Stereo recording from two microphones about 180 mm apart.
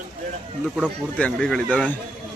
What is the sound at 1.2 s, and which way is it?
Speech, 5° left (ahead or behind).